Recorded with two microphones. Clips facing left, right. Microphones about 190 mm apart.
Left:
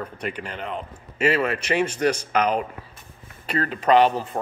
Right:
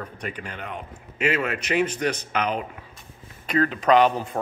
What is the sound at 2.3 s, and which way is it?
Speech, 40° left (ahead or behind).